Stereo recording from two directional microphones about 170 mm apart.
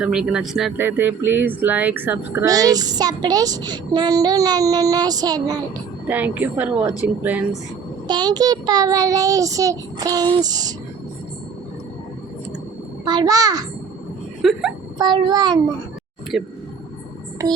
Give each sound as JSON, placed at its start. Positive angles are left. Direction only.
{"t": 0.0, "sound": "speech", "side_deg": -5}
{"t": 6.1, "sound": "speech", "side_deg": -10}
{"t": 8.0, "sound": "speech", "side_deg": -25}
{"t": 13.1, "sound": "speech", "side_deg": -25}
{"t": 14.4, "sound": "speech", "side_deg": 0}
{"t": 14.9, "sound": "speech", "side_deg": -25}
{"t": 16.3, "sound": "speech", "side_deg": 0}
{"t": 17.4, "sound": "speech", "side_deg": -20}